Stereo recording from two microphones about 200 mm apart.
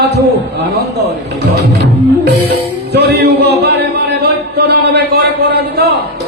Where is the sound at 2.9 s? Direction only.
55° right (ahead or behind).